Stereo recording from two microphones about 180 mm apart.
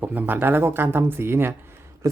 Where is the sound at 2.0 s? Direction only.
20° right (ahead or behind).